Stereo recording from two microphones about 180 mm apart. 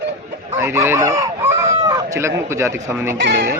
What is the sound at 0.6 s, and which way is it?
Speech, 15° right (ahead or behind).